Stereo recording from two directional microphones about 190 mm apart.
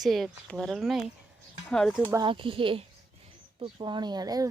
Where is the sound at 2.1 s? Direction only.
25° right (ahead or behind).